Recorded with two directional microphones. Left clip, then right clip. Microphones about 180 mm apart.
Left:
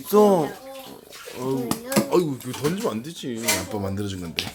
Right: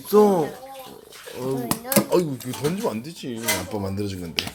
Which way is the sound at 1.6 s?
45° right (ahead or behind).